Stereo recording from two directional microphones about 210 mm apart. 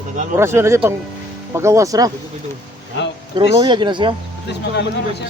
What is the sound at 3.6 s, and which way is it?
Speech, 20° right (ahead or behind).